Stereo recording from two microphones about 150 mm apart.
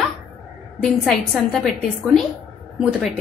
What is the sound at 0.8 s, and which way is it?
Speech, centre (ahead or behind).